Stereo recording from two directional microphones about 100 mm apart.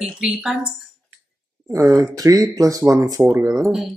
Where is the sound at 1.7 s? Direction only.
35° right (ahead or behind).